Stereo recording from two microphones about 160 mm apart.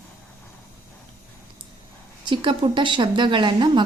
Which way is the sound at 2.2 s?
30° right (ahead or behind).